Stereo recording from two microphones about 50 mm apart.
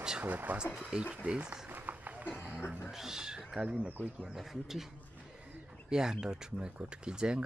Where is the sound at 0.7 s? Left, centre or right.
Centre.